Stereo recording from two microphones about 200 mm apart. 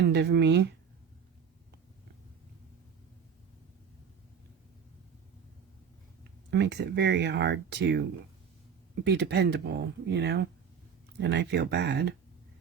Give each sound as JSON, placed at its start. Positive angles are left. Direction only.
{"t": 0.1, "sound": "speech", "side_deg": -60}
{"t": 6.5, "sound": "speech", "side_deg": -60}
{"t": 9.0, "sound": "speech", "side_deg": -55}